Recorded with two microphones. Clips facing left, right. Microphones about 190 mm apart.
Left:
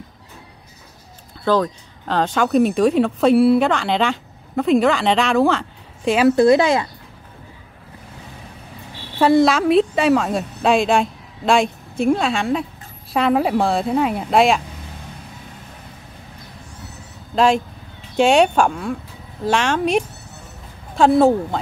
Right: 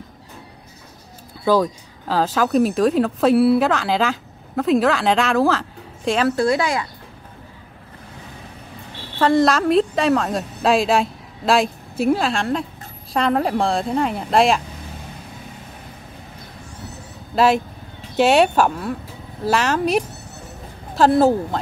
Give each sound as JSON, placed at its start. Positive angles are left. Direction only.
{"t": 1.4, "sound": "speech", "side_deg": -10}
{"t": 6.2, "sound": "speech", "side_deg": 20}
{"t": 9.2, "sound": "a woman's voice", "side_deg": 5}
{"t": 18.1, "sound": "a woman's voice", "side_deg": -5}